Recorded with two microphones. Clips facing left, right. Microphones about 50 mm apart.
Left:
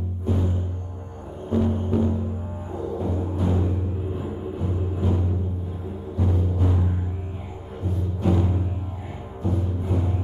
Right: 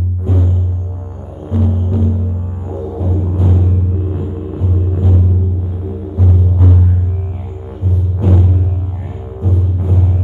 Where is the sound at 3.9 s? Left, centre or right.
Right.